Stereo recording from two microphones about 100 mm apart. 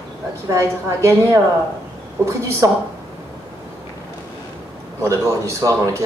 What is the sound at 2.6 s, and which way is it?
Speech, 30° right (ahead or behind).